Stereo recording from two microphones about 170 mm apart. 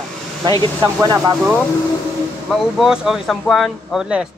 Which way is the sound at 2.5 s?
Centre (ahead or behind).